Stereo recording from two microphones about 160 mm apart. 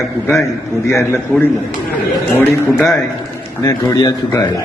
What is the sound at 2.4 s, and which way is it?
Speech, 10° left (ahead or behind).